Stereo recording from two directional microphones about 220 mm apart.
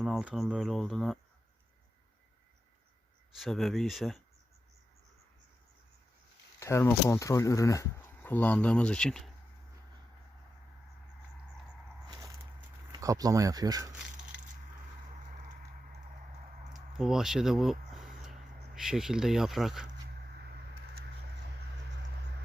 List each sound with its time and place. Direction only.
0.0 s speech: centre (ahead or behind)
3.3 s speech: centre (ahead or behind)
6.6 s speech: 10° left (ahead or behind)
12.0 s a sound: 20° right (ahead or behind)
12.9 s speech: 15° right (ahead or behind)
17.0 s speech: centre (ahead or behind)